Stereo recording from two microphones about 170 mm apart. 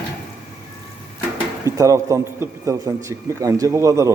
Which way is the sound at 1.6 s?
20° right (ahead or behind).